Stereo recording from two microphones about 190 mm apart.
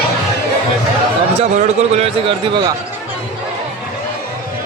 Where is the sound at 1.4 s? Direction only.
35° right (ahead or behind).